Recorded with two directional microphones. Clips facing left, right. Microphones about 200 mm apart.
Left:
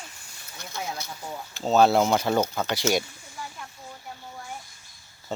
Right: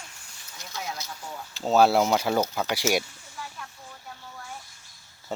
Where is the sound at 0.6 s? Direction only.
55° left (ahead or behind).